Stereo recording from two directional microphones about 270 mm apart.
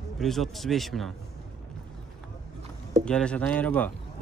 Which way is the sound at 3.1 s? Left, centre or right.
Centre.